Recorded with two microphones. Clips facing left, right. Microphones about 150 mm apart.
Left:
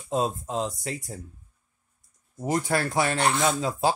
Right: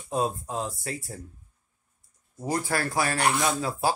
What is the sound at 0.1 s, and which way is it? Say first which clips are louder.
Speech: left 1 dB; 20° left (ahead or behind).